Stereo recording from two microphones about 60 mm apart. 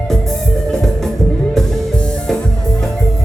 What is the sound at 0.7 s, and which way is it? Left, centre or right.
Music, centre.